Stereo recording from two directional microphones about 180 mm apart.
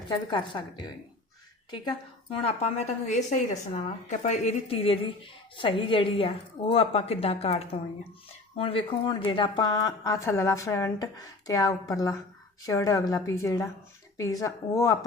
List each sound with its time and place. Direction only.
0.3 s a woman's voice: 25° left (ahead or behind)
1.7 s a woman's voice: 25° left (ahead or behind)
2.4 s a woman's voice: 35° left (ahead or behind); by 14.9 s 20° left (ahead or behind)